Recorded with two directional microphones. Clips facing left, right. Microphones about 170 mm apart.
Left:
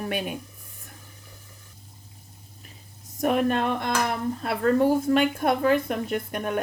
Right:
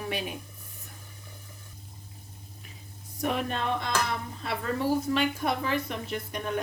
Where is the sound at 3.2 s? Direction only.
55° left (ahead or behind).